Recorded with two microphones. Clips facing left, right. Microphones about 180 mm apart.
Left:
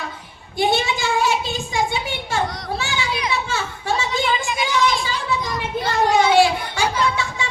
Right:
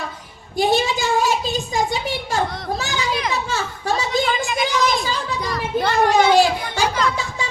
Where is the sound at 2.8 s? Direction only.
40° right (ahead or behind).